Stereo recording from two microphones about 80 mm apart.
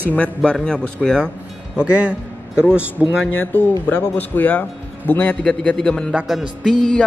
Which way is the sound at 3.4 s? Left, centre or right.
Left.